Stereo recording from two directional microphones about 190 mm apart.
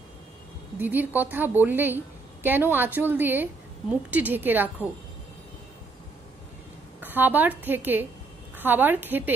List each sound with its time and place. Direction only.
0.7 s a woman's voice: 10° right (ahead or behind)
7.0 s a woman's voice: 10° right (ahead or behind)